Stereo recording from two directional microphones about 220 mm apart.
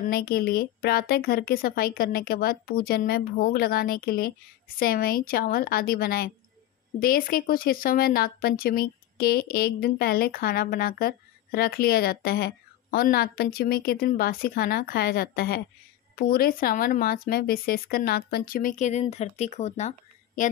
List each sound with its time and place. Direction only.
0.1 s speech: 45° left (ahead or behind)